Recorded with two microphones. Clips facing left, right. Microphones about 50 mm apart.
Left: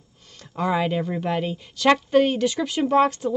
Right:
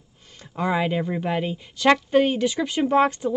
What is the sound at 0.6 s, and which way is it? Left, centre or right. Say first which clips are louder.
A woman's voice: even; centre.